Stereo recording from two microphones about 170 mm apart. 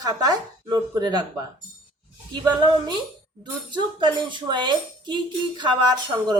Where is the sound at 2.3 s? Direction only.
30° right (ahead or behind).